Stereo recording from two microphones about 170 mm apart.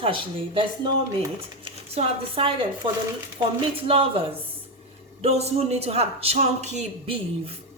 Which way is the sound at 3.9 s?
35° right (ahead or behind).